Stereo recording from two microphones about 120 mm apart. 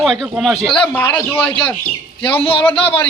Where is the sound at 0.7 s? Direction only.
15° left (ahead or behind).